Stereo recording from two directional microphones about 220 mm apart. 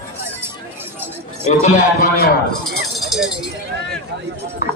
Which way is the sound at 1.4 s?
30° left (ahead or behind).